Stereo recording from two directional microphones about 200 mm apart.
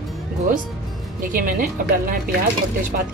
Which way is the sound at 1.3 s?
45° right (ahead or behind).